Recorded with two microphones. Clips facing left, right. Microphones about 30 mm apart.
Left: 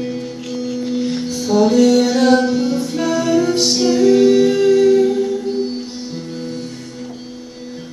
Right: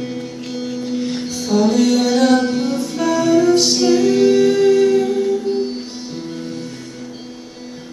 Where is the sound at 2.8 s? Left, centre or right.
Centre.